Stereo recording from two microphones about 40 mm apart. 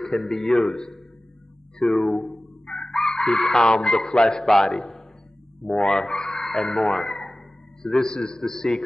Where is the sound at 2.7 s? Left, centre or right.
Centre.